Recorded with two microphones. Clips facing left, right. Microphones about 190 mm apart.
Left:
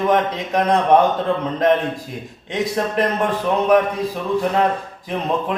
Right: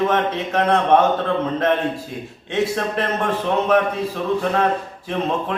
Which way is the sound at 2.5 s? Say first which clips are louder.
Even; 15° left (ahead or behind).